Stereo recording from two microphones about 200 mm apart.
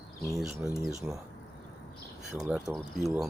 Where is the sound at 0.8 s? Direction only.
15° right (ahead or behind).